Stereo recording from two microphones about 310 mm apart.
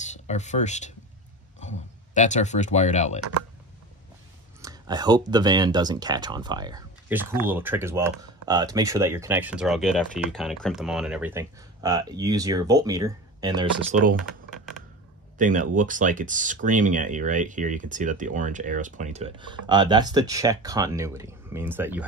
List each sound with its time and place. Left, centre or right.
0.0 s speech: left
4.6 s speech: centre
13.9 s speech: right
15.3 s speech: right; by 22.0 s centre